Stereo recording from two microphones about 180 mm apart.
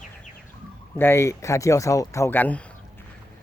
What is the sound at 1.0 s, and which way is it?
Speech, 15° left (ahead or behind).